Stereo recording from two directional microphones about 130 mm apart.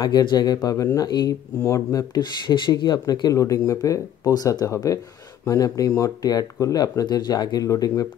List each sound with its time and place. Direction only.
0.0 s speech: 35° left (ahead or behind)